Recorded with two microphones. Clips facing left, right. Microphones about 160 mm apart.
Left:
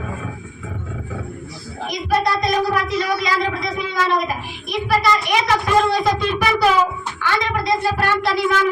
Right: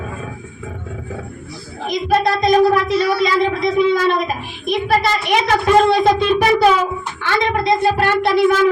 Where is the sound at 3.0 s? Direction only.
70° right (ahead or behind).